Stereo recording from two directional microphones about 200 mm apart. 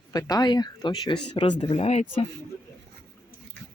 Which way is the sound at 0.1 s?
20° left (ahead or behind).